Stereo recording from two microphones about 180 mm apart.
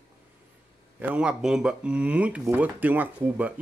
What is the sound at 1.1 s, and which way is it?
Speech, 5° right (ahead or behind).